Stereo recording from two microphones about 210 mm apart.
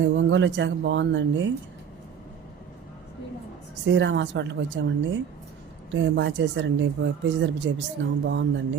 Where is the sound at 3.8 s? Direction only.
60° right (ahead or behind).